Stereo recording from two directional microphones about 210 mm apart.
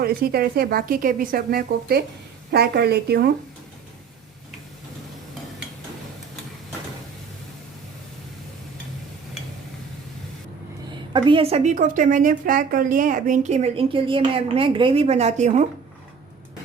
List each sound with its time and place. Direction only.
0.0 s speech: 45° right (ahead or behind)
11.1 s a woman's voice: 25° right (ahead or behind)